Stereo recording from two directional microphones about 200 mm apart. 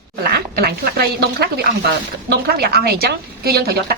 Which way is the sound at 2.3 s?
50° right (ahead or behind).